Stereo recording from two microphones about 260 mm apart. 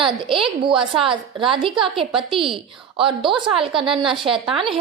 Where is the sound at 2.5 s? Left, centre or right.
Centre.